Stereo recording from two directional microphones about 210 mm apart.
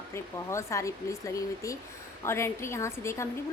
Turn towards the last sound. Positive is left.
turn(degrees=15)  # may be behind; listen again after turning